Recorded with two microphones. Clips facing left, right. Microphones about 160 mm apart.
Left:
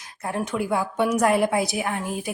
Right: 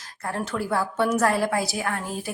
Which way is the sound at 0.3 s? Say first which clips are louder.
Left 2 dB; 15° left (ahead or behind).